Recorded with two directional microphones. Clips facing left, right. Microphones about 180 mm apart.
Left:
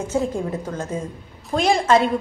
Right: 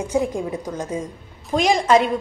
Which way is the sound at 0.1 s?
15° right (ahead or behind).